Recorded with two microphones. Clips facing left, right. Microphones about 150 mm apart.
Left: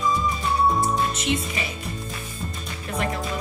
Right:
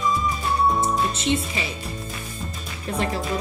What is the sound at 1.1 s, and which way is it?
Speech, 30° right (ahead or behind).